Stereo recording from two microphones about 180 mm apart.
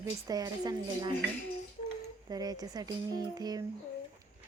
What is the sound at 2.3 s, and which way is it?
Speech, 20° right (ahead or behind).